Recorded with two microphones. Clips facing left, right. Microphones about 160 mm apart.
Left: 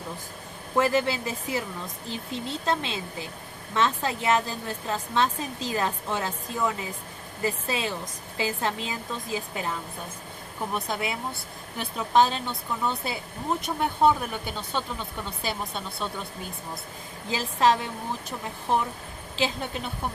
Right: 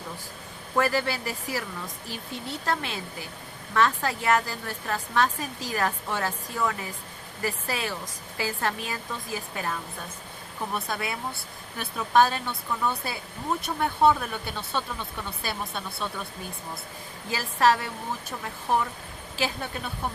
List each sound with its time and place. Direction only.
0.8 s speech: 20° left (ahead or behind)
10.8 s speech: 20° left (ahead or behind)
17.2 s speech: 20° left (ahead or behind)
19.4 s speech: 20° left (ahead or behind)